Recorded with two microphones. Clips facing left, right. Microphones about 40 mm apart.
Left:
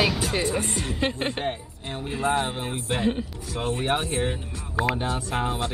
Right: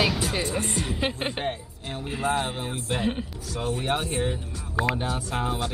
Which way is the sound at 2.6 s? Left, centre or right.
Left.